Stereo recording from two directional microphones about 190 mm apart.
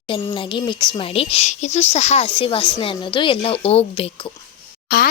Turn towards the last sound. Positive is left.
turn(degrees=55)  # may be behind; listen again after turning